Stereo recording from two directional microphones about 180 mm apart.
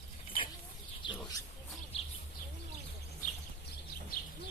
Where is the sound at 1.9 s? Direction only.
35° left (ahead or behind).